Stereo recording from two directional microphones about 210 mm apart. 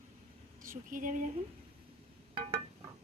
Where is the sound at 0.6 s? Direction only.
40° right (ahead or behind).